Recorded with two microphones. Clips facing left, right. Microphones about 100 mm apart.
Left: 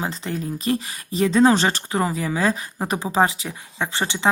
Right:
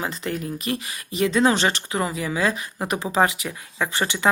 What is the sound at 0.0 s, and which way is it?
Speech, 35° left (ahead or behind).